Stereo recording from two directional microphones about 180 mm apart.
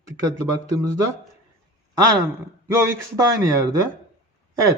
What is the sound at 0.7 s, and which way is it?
Speech, 20° right (ahead or behind).